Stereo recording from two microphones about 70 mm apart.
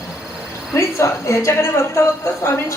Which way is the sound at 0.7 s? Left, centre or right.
Left.